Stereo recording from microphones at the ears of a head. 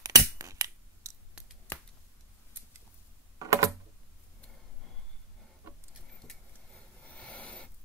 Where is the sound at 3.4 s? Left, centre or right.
Right.